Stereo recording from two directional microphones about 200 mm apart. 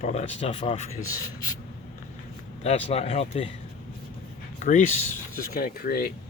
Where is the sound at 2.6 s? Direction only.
30° left (ahead or behind).